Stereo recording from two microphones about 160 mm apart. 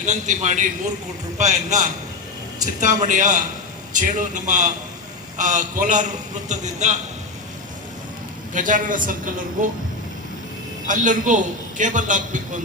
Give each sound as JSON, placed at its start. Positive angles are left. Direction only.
{"t": 0.0, "sound": "a man's voice", "side_deg": -50}
{"t": 8.5, "sound": "a woman's voice", "side_deg": -55}
{"t": 10.8, "sound": "a man's voice", "side_deg": -55}